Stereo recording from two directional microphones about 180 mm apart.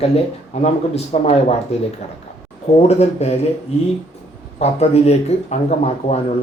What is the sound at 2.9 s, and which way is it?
Speech, 35° left (ahead or behind).